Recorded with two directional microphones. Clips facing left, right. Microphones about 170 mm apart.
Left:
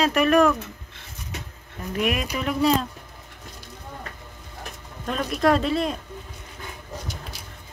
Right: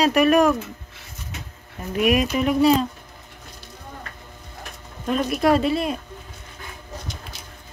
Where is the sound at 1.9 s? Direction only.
15° right (ahead or behind).